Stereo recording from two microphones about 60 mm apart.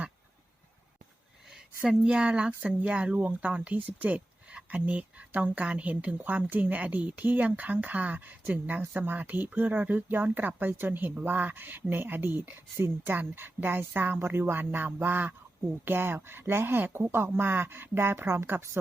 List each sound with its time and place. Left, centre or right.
1.8 s speech: centre; by 18.8 s right